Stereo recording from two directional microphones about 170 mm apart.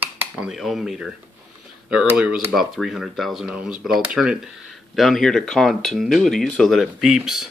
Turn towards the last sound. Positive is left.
turn(degrees=0)  # may be behind; listen again after turning